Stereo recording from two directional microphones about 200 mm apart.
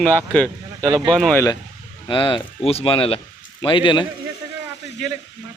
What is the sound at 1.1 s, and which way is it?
Speech, 5° left (ahead or behind).